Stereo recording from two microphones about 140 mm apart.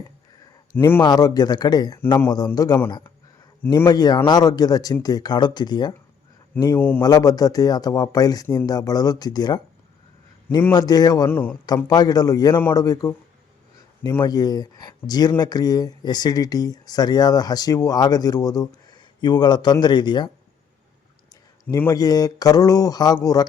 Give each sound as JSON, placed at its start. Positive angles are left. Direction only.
{"t": 1.0, "sound": "speech", "side_deg": 30}
{"t": 3.8, "sound": "speech", "side_deg": 30}
{"t": 6.6, "sound": "speech", "side_deg": 20}
{"t": 7.0, "sound": "speech", "side_deg": 25}
{"t": 10.7, "sound": "speech", "side_deg": 30}
{"t": 11.3, "sound": "speech", "side_deg": 15}
{"t": 11.9, "sound": "speech", "side_deg": 30}
{"t": 14.2, "sound": "speech", "side_deg": 30}
{"t": 21.8, "sound": "speech", "side_deg": 25}